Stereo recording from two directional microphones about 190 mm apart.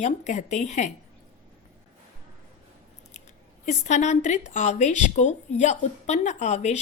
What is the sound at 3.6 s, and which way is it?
Speech, 40° left (ahead or behind).